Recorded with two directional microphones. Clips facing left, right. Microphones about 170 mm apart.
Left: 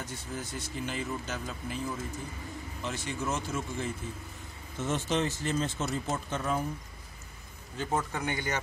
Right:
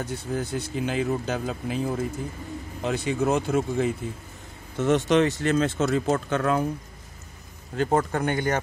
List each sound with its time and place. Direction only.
0.0 s speech: 65° right (ahead or behind)
7.7 s speech: 75° right (ahead or behind)
8.0 s speech: 55° right (ahead or behind)